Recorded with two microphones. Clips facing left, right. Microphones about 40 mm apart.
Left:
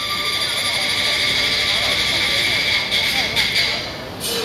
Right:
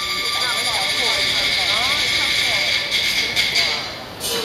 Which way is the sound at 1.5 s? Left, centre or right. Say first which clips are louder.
Even; centre.